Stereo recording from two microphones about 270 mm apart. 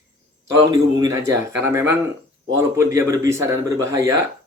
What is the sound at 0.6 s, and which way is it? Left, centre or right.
Speech, centre.